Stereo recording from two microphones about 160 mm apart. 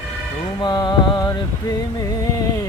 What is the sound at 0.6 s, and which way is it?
Music, 25° left (ahead or behind).